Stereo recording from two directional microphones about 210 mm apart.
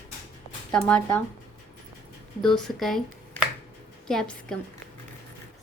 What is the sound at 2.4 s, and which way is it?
A woman's voice, 5° left (ahead or behind).